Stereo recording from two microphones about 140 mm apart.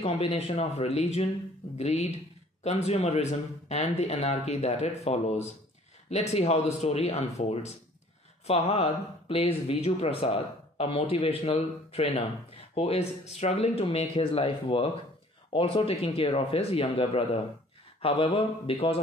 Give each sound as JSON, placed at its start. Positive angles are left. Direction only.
{"t": 0.0, "sound": "speech", "side_deg": 45}